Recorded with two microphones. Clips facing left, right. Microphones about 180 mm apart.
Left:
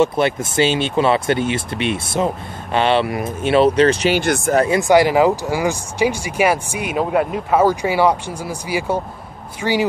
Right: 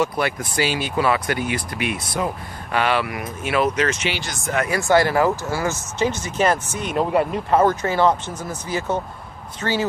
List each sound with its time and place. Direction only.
0.0 s speech: 25° left (ahead or behind)
4.2 s speech: 55° left (ahead or behind)
4.6 s speech: 15° left (ahead or behind)